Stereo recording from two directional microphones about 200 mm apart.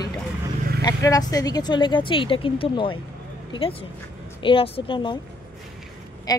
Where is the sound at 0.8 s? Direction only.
20° left (ahead or behind).